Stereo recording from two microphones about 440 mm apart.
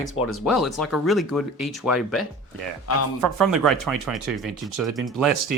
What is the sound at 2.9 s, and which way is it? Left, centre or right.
Speech, left.